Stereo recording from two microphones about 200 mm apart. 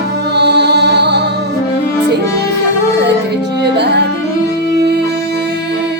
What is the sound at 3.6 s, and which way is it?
Music, 55° right (ahead or behind).